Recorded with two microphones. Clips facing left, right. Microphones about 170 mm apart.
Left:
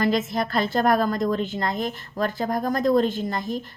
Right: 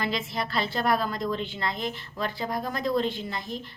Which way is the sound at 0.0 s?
45° left (ahead or behind).